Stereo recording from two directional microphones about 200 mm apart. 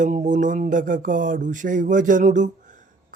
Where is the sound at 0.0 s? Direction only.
40° right (ahead or behind).